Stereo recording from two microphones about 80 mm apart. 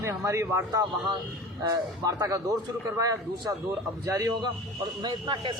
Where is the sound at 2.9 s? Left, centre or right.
Right.